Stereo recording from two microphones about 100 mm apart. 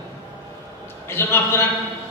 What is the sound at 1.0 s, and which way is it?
Speech, 25° left (ahead or behind).